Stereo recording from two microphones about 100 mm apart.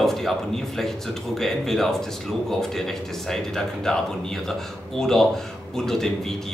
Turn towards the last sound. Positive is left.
turn(degrees=5)  # may be behind; listen again after turning